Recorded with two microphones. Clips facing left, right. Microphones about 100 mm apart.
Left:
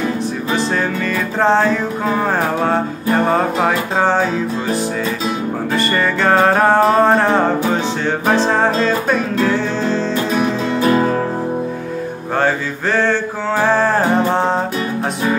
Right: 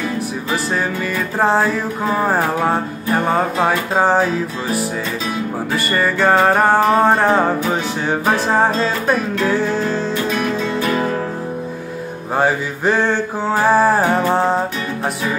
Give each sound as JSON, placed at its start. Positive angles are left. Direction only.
{"t": 1.4, "sound": "music", "side_deg": -5}
{"t": 5.8, "sound": "music", "side_deg": -5}
{"t": 9.8, "sound": "music", "side_deg": 30}
{"t": 12.4, "sound": "music", "side_deg": -15}